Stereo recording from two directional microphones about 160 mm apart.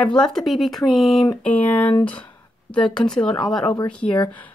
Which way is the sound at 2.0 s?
10° left (ahead or behind).